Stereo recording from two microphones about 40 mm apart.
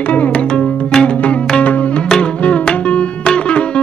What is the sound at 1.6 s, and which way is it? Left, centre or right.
Music, left.